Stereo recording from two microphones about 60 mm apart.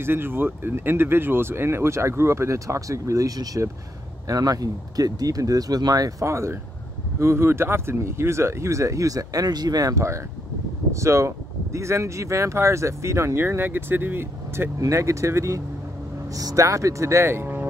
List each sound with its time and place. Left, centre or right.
0.0 s speech: right
4.3 s speech: right
6.2 s speech: right
14.8 s speech: right
16.3 s speech: right